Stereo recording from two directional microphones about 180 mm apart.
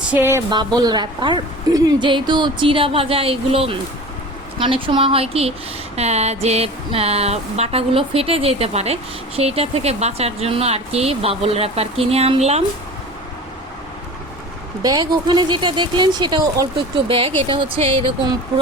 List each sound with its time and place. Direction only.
0.1 s speech: 10° right (ahead or behind); by 12.6 s 35° right (ahead or behind)
14.8 s speech: 20° right (ahead or behind)